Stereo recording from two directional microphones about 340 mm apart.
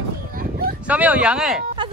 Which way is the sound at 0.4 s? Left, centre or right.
Right.